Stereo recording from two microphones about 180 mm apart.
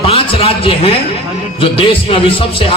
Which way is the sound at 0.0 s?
30° left (ahead or behind).